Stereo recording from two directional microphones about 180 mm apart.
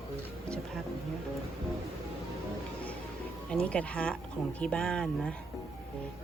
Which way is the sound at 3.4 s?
5° left (ahead or behind).